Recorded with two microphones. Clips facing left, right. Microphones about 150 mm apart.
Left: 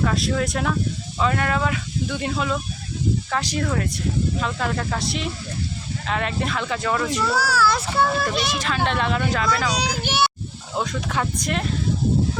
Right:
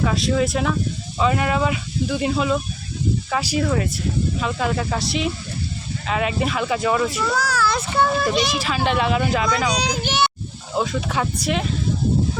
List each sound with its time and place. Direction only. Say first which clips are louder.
0.0 s speech: right 2 dB; centre (ahead or behind)
7.3 s speech: left 2 dB; 5° left (ahead or behind); by 9.5 s 10° right (ahead or behind)
9.5 s a child's voice: right 2 dB; centre (ahead or behind)
10.8 s speech: right 3 dB; 5° right (ahead or behind)